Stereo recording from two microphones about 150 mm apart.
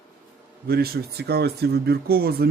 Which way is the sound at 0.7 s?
90° right.